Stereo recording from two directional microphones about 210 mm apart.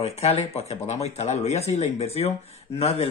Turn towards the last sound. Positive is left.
turn(degrees=30)  # may be behind; listen again after turning